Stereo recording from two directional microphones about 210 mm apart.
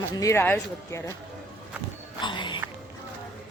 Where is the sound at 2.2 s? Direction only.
20° left (ahead or behind).